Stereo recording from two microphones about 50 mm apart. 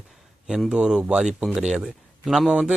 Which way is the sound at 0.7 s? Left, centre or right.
Centre.